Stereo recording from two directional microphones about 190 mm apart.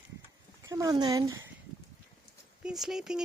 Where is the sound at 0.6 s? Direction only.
15° right (ahead or behind).